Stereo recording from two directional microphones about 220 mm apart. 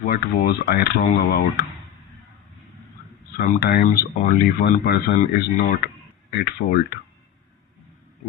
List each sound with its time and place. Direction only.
0.0 s speech: 40° left (ahead or behind)
3.3 s speech: 40° left (ahead or behind)
6.3 s speech: 45° left (ahead or behind)